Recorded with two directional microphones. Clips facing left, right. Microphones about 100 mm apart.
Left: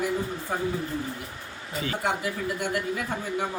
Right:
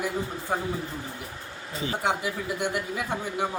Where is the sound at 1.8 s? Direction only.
20° right (ahead or behind).